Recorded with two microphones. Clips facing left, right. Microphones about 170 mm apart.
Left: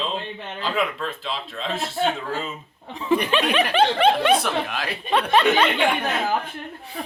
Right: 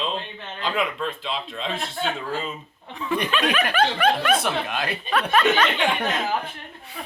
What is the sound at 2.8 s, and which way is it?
Speech, 30° left (ahead or behind).